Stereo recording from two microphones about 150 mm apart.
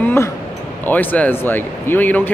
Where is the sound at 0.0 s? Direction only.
15° left (ahead or behind).